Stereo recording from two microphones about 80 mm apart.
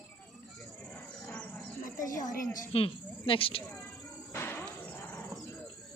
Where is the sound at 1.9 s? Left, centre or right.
Left.